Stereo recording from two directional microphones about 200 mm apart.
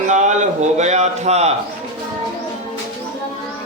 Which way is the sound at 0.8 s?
35° right (ahead or behind).